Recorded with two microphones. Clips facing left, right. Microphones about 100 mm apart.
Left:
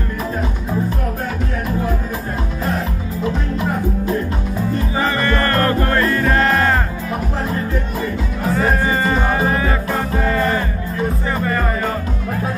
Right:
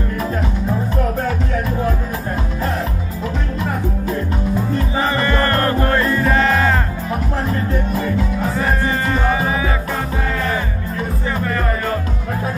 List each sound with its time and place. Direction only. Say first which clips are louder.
5.0 s music: even; 15° right (ahead or behind)
6.2 s music: even; centre (ahead or behind)
8.8 s music: left 1 dB; 5° left (ahead or behind)